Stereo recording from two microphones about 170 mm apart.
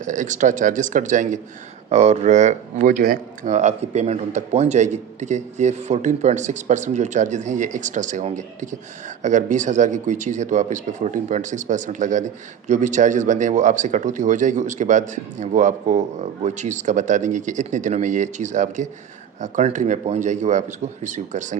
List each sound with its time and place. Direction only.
0.0 s speech: 50° right (ahead or behind)